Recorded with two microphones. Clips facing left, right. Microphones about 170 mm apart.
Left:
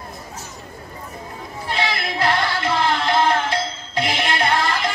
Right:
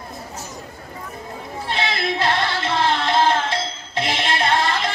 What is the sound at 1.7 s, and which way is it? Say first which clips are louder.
Music: even; 25° right (ahead or behind).